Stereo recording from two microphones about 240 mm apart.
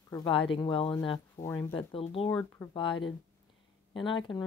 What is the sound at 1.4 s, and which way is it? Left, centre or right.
Speech, centre.